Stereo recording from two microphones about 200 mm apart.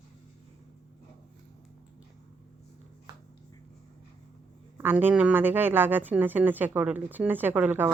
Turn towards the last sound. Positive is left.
turn(degrees=-10)  # may be behind; listen again after turning